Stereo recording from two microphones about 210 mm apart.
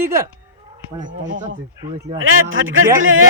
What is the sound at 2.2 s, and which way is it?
Speech, 70° right (ahead or behind).